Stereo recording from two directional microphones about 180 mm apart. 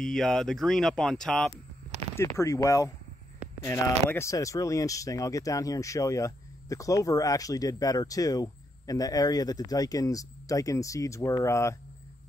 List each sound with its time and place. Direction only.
0.0 s speech: 5° left (ahead or behind)
2.1 s speech: 15° left (ahead or behind)